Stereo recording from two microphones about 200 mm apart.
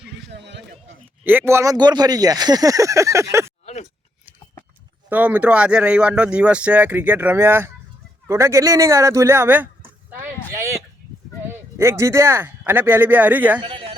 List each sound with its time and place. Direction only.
0.3 s speech: 60° right (ahead or behind)
1.2 s speech: 10° right (ahead or behind)
5.0 s speech: 10° right (ahead or behind)
10.1 s a sound: 10° right (ahead or behind)
11.4 s speech: 10° right (ahead or behind)
13.6 s speech: 25° right (ahead or behind)